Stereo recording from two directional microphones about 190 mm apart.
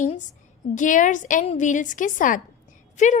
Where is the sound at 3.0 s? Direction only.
40° left (ahead or behind).